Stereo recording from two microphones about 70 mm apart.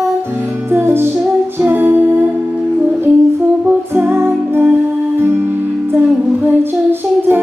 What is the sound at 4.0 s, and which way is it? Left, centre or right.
Music, right.